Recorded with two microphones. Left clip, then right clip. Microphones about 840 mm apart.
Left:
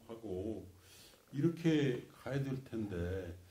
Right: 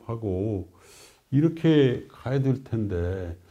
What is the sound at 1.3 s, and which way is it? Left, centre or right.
A man's voice, right.